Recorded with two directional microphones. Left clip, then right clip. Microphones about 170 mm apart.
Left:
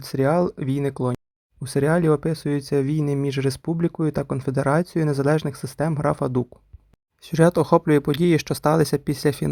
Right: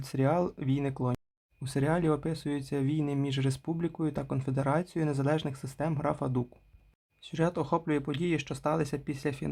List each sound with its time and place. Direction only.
0.0 s speech: 30° left (ahead or behind)